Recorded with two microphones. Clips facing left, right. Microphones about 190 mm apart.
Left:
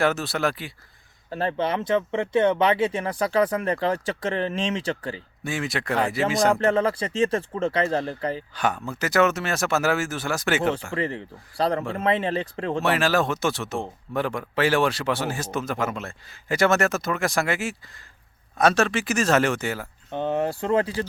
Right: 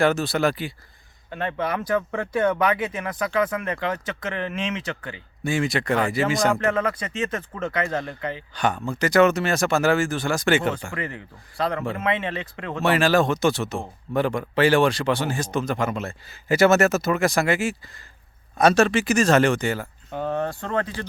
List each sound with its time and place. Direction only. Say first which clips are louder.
0.0 s speech: right 3 dB; centre (ahead or behind)
1.3 s speech: left 2 dB; 35° left (ahead or behind)
5.4 s speech: right 6 dB; centre (ahead or behind)
6.5 s speech: left 2 dB; 30° left (ahead or behind)
8.5 s speech: right 2 dB; 5° left (ahead or behind)
10.9 s speech: left 4 dB; 30° left (ahead or behind)
12.8 s speech: right 4 dB; centre (ahead or behind)
20.1 s speech: left 2 dB; 25° left (ahead or behind)